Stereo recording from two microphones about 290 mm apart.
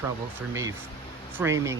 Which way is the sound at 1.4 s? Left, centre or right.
Centre.